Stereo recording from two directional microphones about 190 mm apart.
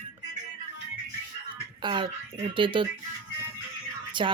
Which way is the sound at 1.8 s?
25° right (ahead or behind).